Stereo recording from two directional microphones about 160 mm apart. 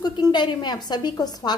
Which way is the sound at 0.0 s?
25° left (ahead or behind).